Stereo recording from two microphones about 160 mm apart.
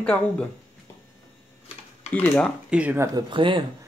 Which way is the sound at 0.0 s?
5° left (ahead or behind).